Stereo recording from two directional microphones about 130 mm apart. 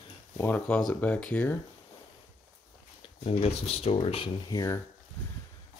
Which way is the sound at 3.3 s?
50° left (ahead or behind).